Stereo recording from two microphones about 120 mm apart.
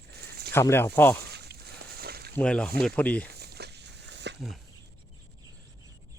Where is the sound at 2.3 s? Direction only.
10° left (ahead or behind).